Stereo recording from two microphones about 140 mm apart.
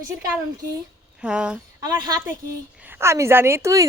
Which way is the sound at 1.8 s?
30° right (ahead or behind).